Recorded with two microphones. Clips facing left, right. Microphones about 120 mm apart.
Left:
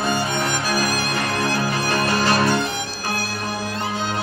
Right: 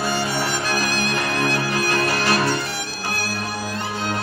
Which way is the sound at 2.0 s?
25° left (ahead or behind).